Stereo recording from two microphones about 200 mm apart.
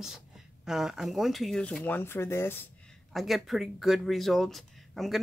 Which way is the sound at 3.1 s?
Centre (ahead or behind).